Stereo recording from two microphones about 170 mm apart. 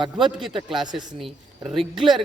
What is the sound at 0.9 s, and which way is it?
Speech, 25° right (ahead or behind).